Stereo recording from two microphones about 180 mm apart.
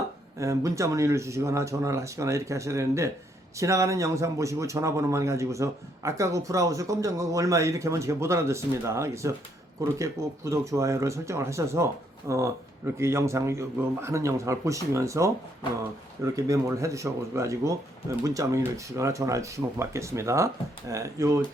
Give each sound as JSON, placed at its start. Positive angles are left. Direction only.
{"t": 0.3, "sound": "a man's voice", "side_deg": -15}